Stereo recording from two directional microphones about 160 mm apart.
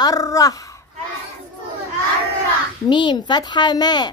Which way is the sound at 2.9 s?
30° left (ahead or behind).